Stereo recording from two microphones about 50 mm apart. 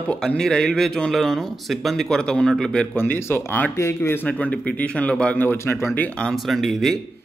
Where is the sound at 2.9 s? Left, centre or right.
Left.